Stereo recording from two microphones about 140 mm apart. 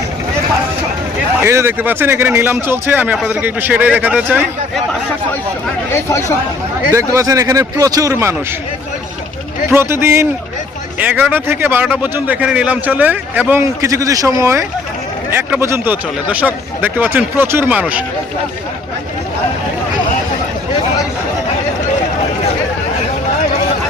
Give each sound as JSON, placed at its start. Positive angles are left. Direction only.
{"t": 1.4, "sound": "speech", "side_deg": -15}
{"t": 5.9, "sound": "speech", "side_deg": 20}
{"t": 6.9, "sound": "speech", "side_deg": -25}
{"t": 9.6, "sound": "speech", "side_deg": -15}